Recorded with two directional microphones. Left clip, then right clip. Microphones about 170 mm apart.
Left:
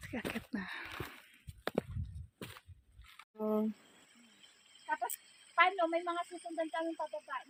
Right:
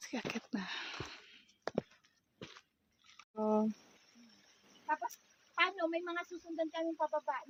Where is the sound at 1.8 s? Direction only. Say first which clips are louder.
Left 2 dB; 90° left.